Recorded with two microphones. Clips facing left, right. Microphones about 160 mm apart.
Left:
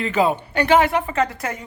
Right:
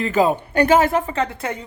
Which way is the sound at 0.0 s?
40° right (ahead or behind).